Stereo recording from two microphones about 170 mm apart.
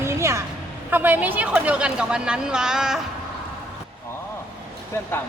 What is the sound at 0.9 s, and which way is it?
Speech, 10° right (ahead or behind).